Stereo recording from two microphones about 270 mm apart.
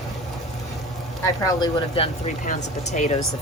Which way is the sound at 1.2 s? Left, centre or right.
Centre.